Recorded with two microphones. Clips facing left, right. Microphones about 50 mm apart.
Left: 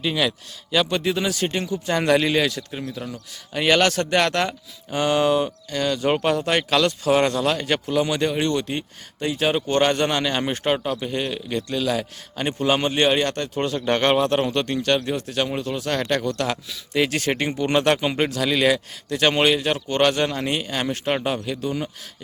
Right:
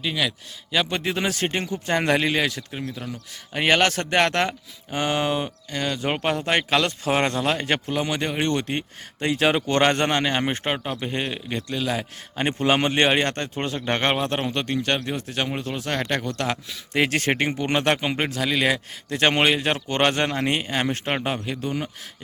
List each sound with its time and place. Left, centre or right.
0.0 s speech: centre
0.7 s speech: centre
1.1 s speech: right; by 3.1 s centre
3.5 s speech: right
9.2 s speech: right
10.1 s speech: right
11.0 s speech: right
11.7 s speech: centre
12.4 s speech: right
16.9 s speech: right; by 18.8 s centre
19.1 s speech: right